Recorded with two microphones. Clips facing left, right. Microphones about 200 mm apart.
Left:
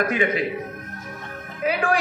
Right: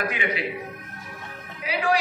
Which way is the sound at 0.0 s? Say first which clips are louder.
Left 6 dB; 45° left (ahead or behind).